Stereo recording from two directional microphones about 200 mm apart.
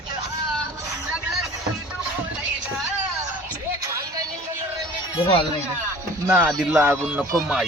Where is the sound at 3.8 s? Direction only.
15° right (ahead or behind).